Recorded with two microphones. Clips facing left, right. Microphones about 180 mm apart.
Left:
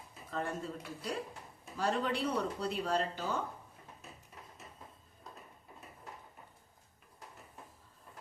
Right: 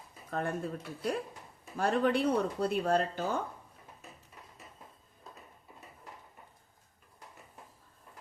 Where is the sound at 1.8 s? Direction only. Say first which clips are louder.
Right 5 dB; 55° right (ahead or behind).